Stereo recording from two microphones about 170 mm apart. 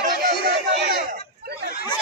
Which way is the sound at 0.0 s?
55° right (ahead or behind).